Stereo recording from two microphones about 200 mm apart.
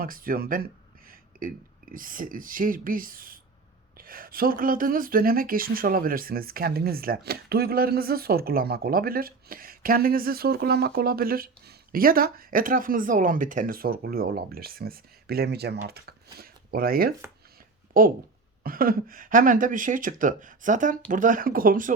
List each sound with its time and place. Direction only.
0.0 s speech: 45° right (ahead or behind)